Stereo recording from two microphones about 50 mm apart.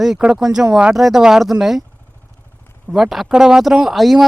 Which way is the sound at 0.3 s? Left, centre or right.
Centre.